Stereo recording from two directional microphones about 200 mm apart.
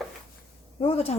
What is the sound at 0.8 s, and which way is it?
Speech, 30° left (ahead or behind).